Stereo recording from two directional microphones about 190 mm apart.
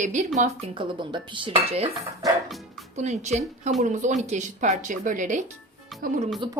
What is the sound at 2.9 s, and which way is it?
Speech, 35° right (ahead or behind).